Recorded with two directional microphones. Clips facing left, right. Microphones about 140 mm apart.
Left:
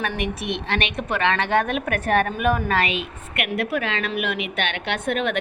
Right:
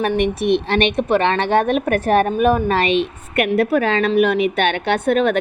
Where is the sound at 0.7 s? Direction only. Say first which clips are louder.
Right 9 dB; 30° right (ahead or behind).